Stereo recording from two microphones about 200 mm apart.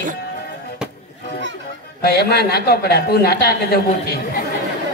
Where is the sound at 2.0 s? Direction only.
55° left (ahead or behind).